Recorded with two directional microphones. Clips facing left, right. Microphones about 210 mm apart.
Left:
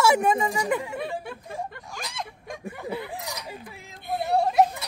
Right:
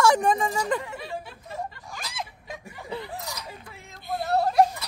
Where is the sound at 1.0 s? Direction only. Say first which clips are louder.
Left 4 dB; 55° left (ahead or behind).